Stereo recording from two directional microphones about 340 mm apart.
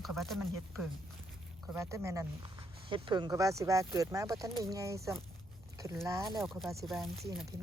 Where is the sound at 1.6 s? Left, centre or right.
Centre.